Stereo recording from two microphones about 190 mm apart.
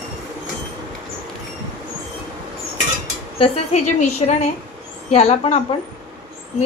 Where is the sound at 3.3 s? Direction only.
30° left (ahead or behind).